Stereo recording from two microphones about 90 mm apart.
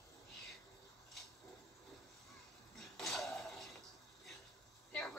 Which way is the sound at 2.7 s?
5° left (ahead or behind).